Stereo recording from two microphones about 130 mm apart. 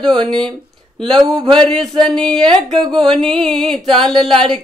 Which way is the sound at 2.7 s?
35° right (ahead or behind).